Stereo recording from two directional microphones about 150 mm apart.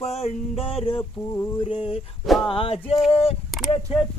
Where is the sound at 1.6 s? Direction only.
35° left (ahead or behind).